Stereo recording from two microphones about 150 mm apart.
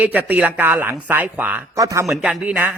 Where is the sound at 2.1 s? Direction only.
Centre (ahead or behind).